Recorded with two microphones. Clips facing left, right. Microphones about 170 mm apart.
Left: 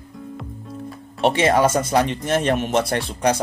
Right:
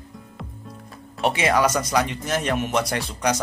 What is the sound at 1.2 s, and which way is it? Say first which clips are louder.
Speech: left 4 dB; 25° left (ahead or behind).